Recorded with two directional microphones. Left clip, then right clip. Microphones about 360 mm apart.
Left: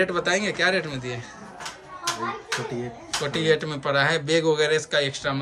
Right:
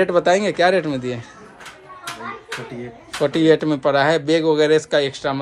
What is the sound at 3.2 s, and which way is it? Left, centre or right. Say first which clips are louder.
A man's voice: right 8 dB; centre.